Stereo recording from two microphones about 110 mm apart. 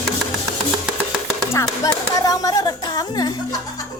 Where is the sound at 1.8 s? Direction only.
35° left (ahead or behind).